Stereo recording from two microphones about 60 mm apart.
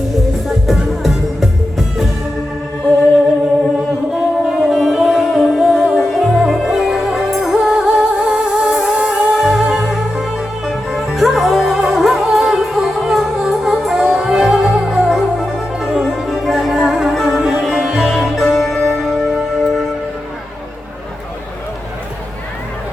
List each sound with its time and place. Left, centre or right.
0.1 s music: centre
4.1 s music: centre
9.3 s music: centre